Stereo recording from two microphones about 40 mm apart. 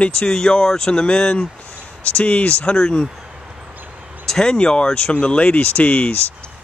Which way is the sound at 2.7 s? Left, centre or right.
Centre.